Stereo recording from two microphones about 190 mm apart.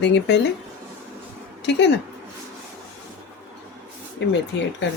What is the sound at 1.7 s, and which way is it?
Speech, 70° left (ahead or behind).